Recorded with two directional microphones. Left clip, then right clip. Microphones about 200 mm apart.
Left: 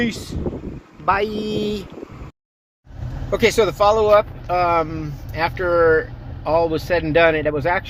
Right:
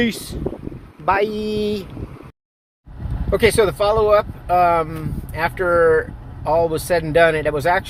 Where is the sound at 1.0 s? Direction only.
20° right (ahead or behind).